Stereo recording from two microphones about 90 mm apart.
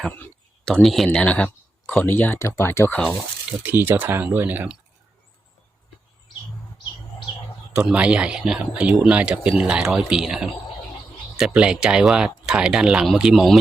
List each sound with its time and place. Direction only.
0.0 s speech: 25° left (ahead or behind)
0.6 s speech: 5° left (ahead or behind)
1.2 s speech: 10° left (ahead or behind)
3.6 s speech: 25° right (ahead or behind)
7.7 s speech: 10° right (ahead or behind)